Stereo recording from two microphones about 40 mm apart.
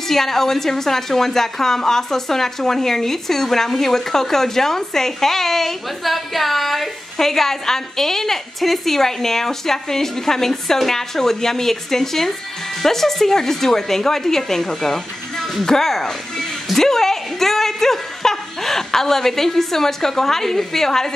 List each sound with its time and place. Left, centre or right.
0.1 s a woman's voice: centre